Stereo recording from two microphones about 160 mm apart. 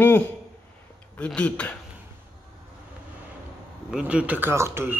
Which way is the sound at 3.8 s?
5° right (ahead or behind).